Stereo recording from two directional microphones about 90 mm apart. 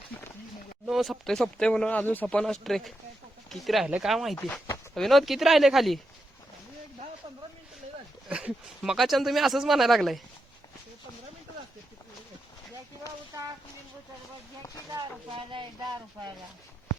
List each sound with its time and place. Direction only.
0.9 s speech: 5° right (ahead or behind); by 2.4 s 15° left (ahead or behind)
2.4 s speech: 5° left (ahead or behind)
8.3 s speech: 15° right (ahead or behind)
15.3 s speech: 65° right (ahead or behind)